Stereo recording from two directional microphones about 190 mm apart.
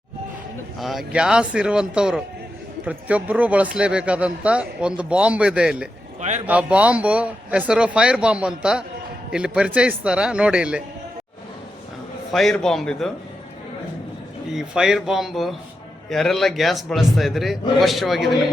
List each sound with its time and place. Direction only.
0.8 s a man's voice: centre (ahead or behind)
6.1 s a man's voice: 35° right (ahead or behind)
6.5 s a man's voice: 5° right (ahead or behind)
12.3 s a man's voice: centre (ahead or behind)
14.5 s a man's voice: 5° right (ahead or behind)